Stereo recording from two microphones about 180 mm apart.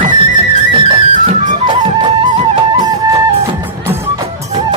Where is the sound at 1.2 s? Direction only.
40° right (ahead or behind).